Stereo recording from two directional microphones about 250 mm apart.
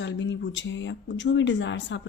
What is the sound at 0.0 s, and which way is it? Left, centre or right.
Speech, left.